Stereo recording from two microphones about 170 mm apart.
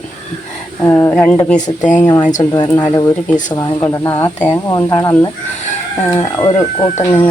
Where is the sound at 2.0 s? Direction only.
15° left (ahead or behind).